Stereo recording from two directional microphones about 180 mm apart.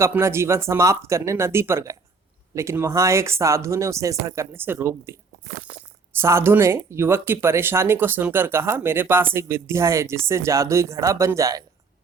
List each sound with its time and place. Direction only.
0.0 s speech: 15° right (ahead or behind)
6.1 s speech: 15° right (ahead or behind)